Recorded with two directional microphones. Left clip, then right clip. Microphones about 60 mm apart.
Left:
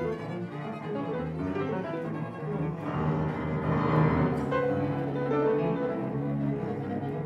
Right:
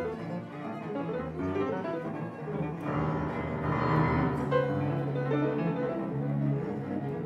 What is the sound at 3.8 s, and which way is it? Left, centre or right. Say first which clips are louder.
Music: left 1 dB; right.